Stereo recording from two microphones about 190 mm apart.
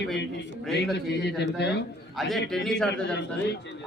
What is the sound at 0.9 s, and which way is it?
Speech, 65° left (ahead or behind).